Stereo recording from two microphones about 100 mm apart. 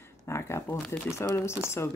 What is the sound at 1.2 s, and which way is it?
Speech, 25° left (ahead or behind).